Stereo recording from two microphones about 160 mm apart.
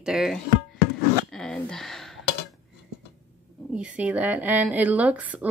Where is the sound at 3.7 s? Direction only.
5° right (ahead or behind).